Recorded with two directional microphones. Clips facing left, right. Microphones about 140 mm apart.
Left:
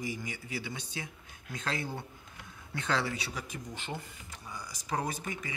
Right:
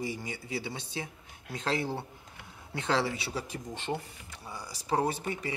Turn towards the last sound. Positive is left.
turn(degrees=-30)  # may be behind; listen again after turning